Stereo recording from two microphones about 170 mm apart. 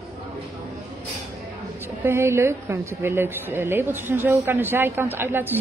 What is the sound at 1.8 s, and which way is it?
Speech, 15° right (ahead or behind).